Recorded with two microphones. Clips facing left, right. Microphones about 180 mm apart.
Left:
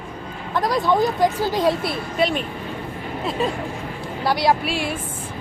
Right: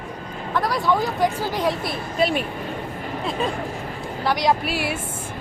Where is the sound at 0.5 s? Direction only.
15° left (ahead or behind).